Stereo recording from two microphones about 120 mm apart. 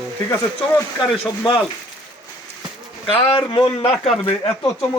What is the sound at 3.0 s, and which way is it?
Speech, 50° left (ahead or behind).